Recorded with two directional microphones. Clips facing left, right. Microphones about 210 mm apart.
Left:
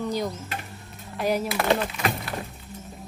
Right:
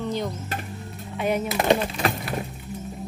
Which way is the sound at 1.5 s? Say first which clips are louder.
Right 2 dB; 20° right (ahead or behind).